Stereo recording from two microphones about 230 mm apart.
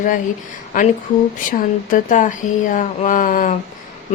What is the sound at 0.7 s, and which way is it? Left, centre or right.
Speech, left.